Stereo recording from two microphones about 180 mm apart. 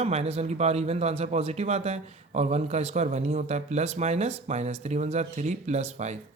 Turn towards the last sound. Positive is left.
turn(degrees=-40)  # may be behind; listen again after turning